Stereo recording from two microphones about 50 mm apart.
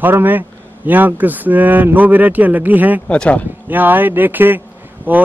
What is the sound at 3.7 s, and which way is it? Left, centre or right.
A man's voice, right.